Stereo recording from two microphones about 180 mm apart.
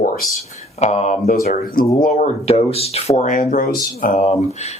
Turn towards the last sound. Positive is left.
turn(degrees=40)  # may be behind; listen again after turning